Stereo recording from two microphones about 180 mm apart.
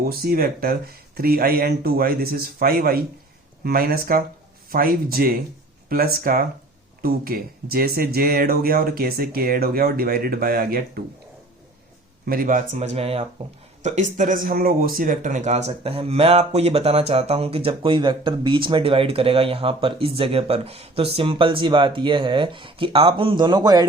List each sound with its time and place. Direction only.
0.0 s speech: 55° right (ahead or behind)
12.2 s speech: 55° right (ahead or behind); by 23.8 s 20° right (ahead or behind)